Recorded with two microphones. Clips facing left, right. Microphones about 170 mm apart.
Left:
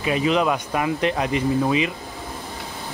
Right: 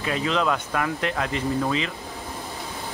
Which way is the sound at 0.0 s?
15° left (ahead or behind).